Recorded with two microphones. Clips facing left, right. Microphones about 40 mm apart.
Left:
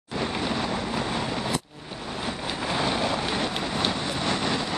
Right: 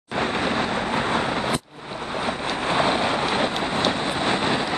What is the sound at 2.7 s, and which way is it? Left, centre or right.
Vehicle, right.